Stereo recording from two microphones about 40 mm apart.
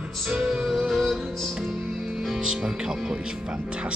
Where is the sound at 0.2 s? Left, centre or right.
Centre.